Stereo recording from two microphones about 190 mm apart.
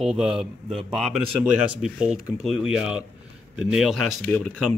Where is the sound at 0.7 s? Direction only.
30° right (ahead or behind).